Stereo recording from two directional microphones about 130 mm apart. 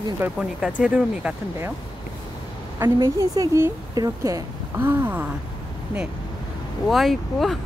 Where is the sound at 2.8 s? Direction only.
25° right (ahead or behind).